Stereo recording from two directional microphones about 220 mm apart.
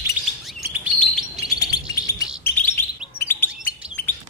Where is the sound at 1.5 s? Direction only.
15° left (ahead or behind).